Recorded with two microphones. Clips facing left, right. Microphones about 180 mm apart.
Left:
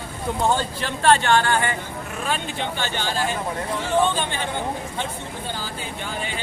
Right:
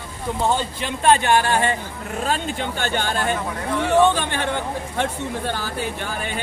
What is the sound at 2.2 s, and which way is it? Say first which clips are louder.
Speech: right 3 dB; 45° right (ahead or behind).